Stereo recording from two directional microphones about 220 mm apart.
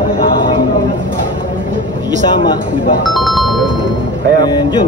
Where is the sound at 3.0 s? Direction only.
Centre (ahead or behind).